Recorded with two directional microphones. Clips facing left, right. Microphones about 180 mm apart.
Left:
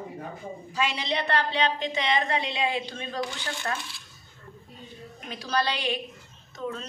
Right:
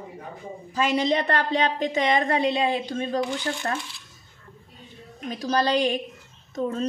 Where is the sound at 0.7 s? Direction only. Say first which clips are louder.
Right 7 dB; 45° right (ahead or behind).